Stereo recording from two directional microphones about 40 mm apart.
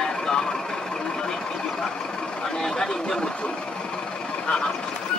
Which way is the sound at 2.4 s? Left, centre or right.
Centre.